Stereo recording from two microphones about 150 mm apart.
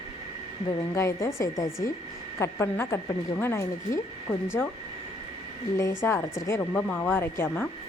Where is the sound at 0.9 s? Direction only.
20° left (ahead or behind).